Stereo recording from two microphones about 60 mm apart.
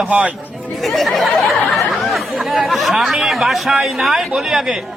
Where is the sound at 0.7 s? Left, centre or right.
Centre.